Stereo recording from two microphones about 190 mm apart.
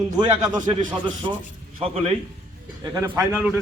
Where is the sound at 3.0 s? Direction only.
10° right (ahead or behind).